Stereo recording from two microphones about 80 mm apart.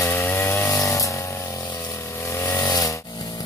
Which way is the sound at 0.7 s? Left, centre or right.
Left.